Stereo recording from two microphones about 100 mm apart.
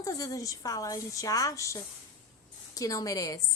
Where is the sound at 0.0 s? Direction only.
35° left (ahead or behind).